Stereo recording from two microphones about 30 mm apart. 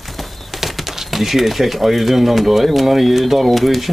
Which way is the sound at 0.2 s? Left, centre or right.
Centre.